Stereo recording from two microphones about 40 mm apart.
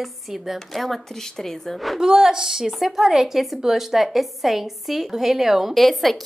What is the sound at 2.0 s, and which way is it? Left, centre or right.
A woman's voice, centre.